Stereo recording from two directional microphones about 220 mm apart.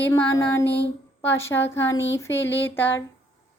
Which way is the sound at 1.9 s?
55° left (ahead or behind).